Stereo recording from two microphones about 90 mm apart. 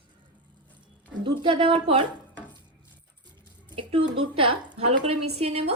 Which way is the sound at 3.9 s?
85° right.